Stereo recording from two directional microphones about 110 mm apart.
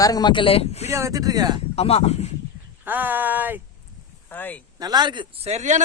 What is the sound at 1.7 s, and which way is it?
Speech, 65° left (ahead or behind).